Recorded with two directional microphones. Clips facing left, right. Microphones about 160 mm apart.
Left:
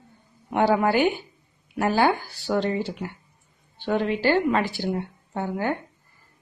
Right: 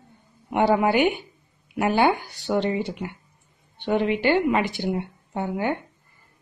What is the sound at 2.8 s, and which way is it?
A woman's voice, 10° right (ahead or behind).